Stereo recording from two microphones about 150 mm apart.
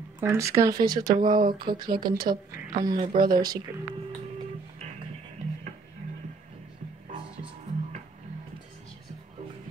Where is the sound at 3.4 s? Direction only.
25° right (ahead or behind).